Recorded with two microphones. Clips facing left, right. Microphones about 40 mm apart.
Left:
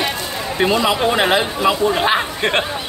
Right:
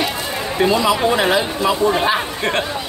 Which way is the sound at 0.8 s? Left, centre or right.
Left.